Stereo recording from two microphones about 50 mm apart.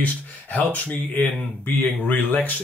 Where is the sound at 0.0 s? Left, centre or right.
Left.